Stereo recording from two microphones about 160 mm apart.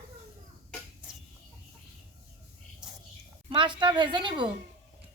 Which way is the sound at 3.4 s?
30° right (ahead or behind).